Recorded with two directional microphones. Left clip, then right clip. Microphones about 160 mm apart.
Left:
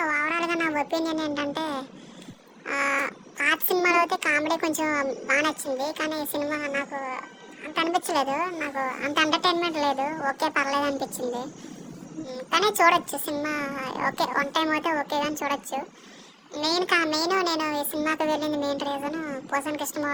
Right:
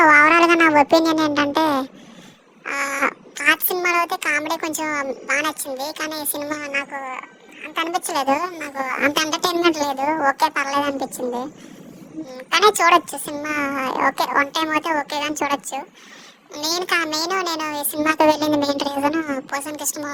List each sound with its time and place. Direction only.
0.0 s a sound: 55° right (ahead or behind)
2.6 s cat: 45° right (ahead or behind)
3.4 s a child's voice: 45° right (ahead or behind)
8.5 s speech: centre (ahead or behind)
8.8 s speech: 50° right (ahead or behind)
9.4 s a woman's voice: 75° right (ahead or behind)
9.9 s a woman's voice: 50° right (ahead or behind); by 11.4 s 30° right (ahead or behind)
12.5 s a child's voice: 45° right (ahead or behind)
14.5 s speech: 50° right (ahead or behind)